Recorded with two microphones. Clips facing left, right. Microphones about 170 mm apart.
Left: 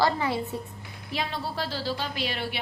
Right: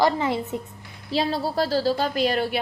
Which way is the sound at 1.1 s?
35° right (ahead or behind).